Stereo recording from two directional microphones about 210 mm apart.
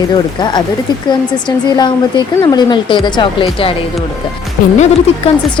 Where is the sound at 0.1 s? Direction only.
20° left (ahead or behind).